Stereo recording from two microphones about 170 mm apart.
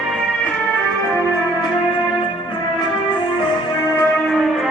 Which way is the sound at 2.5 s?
25° left (ahead or behind).